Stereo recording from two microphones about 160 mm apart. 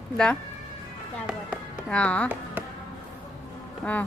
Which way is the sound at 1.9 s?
5° left (ahead or behind).